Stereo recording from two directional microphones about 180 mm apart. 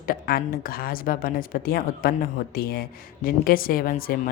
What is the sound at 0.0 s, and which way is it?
A woman's voice, 55° left (ahead or behind).